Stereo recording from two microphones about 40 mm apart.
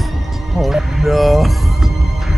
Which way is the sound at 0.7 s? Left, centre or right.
Centre.